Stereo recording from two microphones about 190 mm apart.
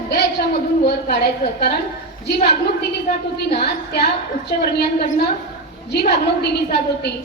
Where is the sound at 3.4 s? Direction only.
60° left (ahead or behind).